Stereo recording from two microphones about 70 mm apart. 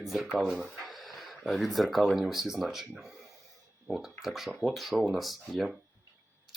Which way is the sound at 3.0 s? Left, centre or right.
Centre.